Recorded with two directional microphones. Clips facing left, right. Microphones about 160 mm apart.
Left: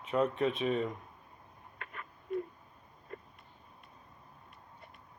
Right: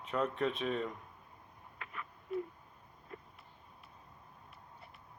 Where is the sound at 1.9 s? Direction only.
45° left (ahead or behind).